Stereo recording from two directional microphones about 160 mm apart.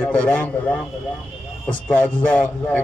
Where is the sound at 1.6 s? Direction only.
10° left (ahead or behind).